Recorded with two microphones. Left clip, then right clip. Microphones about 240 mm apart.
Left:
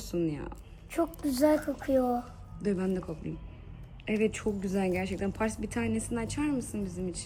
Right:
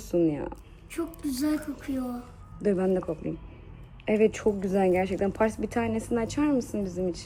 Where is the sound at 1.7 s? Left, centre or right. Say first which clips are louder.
Left 7 dB; centre.